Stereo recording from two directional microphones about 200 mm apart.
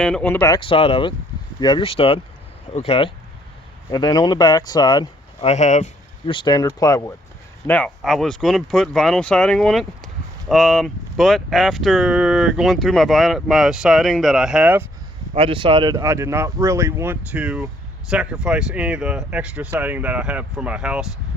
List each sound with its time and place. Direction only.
0.0 s speech: 5° left (ahead or behind)
7.7 s speech: 5° left (ahead or behind)
15.4 s speech: 25° right (ahead or behind); by 21.1 s 5° right (ahead or behind)